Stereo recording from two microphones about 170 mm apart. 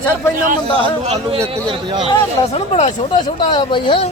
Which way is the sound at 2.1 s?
35° left (ahead or behind).